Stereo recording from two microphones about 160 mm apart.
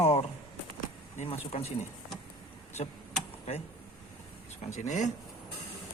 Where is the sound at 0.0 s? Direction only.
40° left (ahead or behind).